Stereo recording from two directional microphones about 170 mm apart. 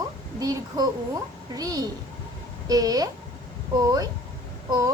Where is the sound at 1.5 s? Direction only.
20° right (ahead or behind).